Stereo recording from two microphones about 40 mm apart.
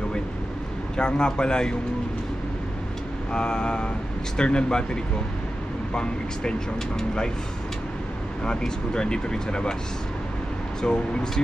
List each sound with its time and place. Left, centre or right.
0.9 s speech: left
3.3 s speech: left
8.5 s speech: left
10.8 s speech: centre